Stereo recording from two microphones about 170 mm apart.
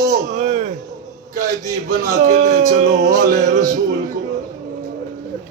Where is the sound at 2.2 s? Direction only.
50° right (ahead or behind).